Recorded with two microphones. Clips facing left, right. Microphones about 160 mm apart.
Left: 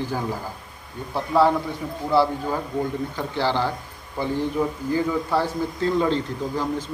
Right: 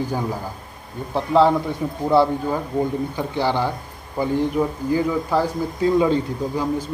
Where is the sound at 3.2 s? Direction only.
15° right (ahead or behind).